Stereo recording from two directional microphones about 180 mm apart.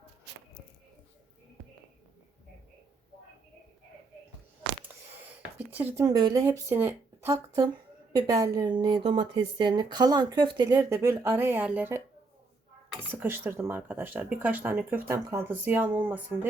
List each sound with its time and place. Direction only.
5.5 s speech: 10° right (ahead or behind)
6.1 s speech: 20° right (ahead or behind)